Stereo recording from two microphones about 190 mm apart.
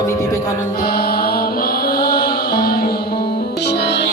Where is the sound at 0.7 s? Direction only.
55° left (ahead or behind).